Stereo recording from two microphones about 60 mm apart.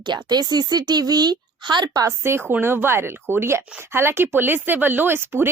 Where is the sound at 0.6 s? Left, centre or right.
Right.